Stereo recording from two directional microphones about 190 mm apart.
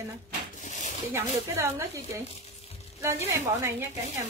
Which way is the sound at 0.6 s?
40° left (ahead or behind).